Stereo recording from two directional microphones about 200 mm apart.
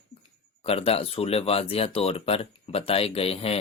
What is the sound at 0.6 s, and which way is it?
A man's voice, 30° left (ahead or behind).